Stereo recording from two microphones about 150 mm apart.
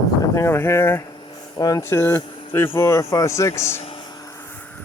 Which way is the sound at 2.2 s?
35° left (ahead or behind).